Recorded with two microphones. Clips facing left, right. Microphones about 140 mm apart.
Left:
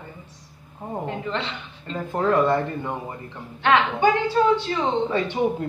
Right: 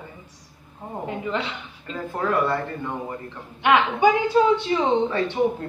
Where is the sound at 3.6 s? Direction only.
10° right (ahead or behind).